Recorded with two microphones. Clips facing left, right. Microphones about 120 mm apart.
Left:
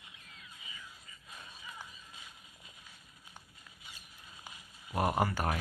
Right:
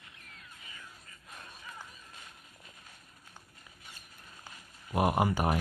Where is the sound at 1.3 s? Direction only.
50° right (ahead or behind).